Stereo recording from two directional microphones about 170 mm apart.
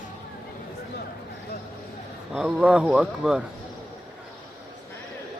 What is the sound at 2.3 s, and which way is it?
A man's voice, 5° right (ahead or behind).